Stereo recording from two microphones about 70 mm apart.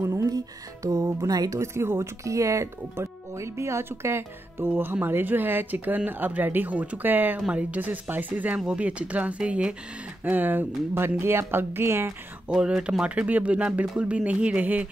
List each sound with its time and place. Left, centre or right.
0.0 s music: right
0.8 s speech: right
1.6 s speech: right
7.3 s speech: centre
10.2 s speech: right
12.5 s speech: centre